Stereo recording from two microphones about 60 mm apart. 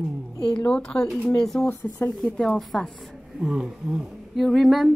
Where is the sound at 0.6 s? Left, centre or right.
Centre.